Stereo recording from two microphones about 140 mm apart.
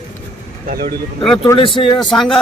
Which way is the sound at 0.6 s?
90° right.